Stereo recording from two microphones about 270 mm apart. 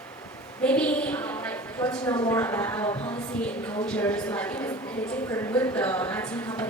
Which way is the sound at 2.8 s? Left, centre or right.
Centre.